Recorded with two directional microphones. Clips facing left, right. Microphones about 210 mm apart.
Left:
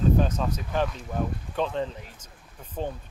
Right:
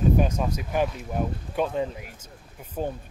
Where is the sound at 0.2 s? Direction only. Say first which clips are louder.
Right 1 dB; 10° right (ahead or behind).